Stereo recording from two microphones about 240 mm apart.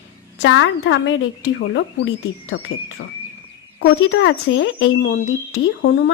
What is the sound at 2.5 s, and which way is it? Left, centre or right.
Speech, left.